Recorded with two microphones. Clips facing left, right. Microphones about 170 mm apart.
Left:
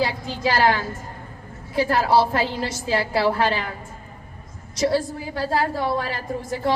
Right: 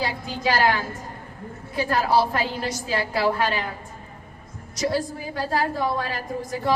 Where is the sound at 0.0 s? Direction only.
25° left (ahead or behind).